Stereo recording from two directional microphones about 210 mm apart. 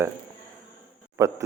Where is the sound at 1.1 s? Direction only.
15° right (ahead or behind).